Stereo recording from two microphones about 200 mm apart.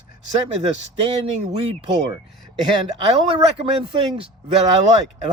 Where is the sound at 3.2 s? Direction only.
25° right (ahead or behind).